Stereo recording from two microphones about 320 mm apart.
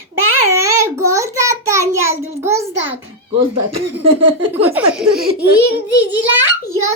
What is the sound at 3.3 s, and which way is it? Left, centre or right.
Speech, right.